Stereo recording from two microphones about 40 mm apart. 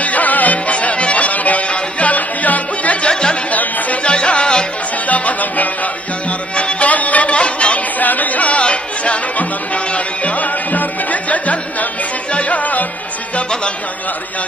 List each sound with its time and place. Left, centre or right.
0.0 s music: left
3.1 s chatter: left
4.0 s music: left
5.0 s music: left
8.0 s music: left